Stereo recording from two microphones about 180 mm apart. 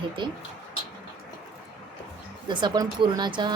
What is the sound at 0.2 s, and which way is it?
Speech, 25° right (ahead or behind).